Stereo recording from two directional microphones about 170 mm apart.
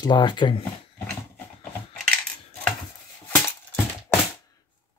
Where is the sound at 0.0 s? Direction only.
25° left (ahead or behind).